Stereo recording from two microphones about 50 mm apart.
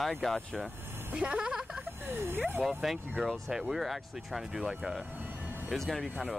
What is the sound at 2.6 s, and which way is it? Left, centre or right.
Speech, centre.